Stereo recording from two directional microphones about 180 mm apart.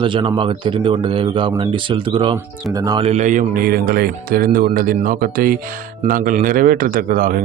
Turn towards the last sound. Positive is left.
turn(degrees=-50)  # may be behind; listen again after turning